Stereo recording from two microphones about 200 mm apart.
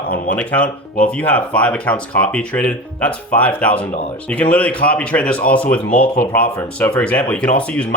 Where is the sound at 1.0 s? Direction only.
5° left (ahead or behind).